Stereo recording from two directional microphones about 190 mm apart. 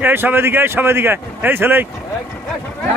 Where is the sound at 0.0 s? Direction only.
10° right (ahead or behind).